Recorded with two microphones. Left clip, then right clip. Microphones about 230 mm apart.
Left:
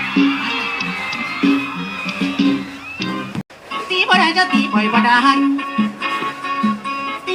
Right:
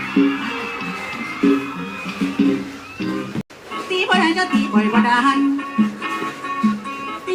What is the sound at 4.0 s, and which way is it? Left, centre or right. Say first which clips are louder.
Music: left 4 dB; left.